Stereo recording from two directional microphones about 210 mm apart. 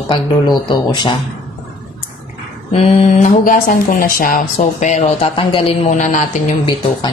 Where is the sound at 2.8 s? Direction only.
30° left (ahead or behind).